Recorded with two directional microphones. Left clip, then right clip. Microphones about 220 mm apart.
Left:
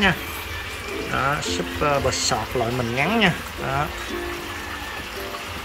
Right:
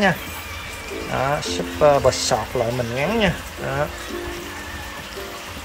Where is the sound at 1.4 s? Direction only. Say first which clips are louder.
Right 6 dB; 20° right (ahead or behind).